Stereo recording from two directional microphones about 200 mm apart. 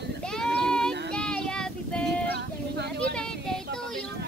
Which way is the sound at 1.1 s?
5° left (ahead or behind).